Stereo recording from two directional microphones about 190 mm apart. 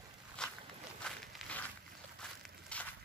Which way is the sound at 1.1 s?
5° left (ahead or behind).